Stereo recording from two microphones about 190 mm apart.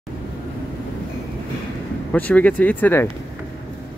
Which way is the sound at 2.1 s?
10° left (ahead or behind).